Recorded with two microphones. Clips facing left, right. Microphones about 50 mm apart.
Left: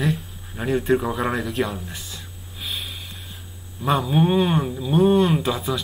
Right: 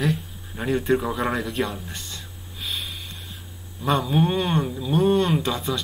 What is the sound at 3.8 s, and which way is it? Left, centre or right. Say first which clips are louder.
Speech: left 2 dB; centre.